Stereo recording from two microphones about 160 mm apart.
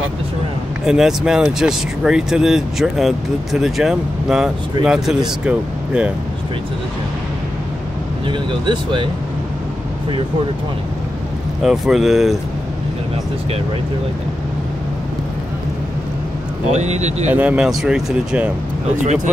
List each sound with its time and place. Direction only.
0.8 s speech: 5° right (ahead or behind)
8.3 s speech: 30° right (ahead or behind)
11.6 s speech: centre (ahead or behind)
16.7 s speech: 45° right (ahead or behind)
17.3 s speech: 10° right (ahead or behind)